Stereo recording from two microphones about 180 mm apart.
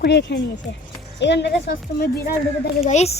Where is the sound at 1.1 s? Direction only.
80° left; by 2.3 s 60° left (ahead or behind).